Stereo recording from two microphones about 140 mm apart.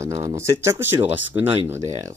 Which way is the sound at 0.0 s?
25° right (ahead or behind).